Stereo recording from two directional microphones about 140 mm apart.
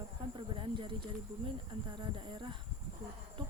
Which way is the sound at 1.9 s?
35° right (ahead or behind).